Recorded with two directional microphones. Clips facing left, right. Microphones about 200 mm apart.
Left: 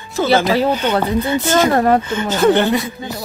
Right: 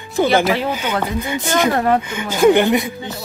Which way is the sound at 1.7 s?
40° left (ahead or behind).